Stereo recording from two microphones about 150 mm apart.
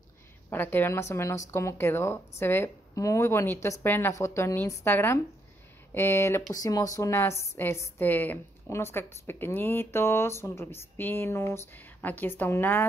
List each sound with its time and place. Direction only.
0.5 s a woman's voice: 15° left (ahead or behind)